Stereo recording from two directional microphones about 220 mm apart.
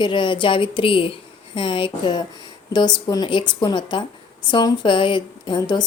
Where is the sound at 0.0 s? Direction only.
20° left (ahead or behind).